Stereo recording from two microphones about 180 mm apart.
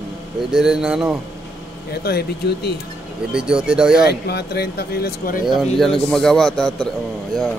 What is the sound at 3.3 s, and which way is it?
Speech, 5° right (ahead or behind).